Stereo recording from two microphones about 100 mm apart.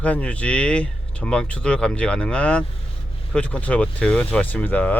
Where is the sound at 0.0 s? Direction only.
15° left (ahead or behind).